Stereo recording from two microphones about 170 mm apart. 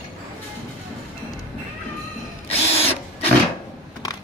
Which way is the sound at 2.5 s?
35° left (ahead or behind).